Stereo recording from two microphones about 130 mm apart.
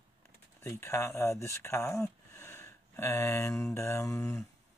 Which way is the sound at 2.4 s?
20° left (ahead or behind).